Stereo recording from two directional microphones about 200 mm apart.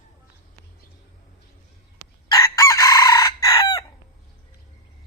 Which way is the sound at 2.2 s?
15° left (ahead or behind).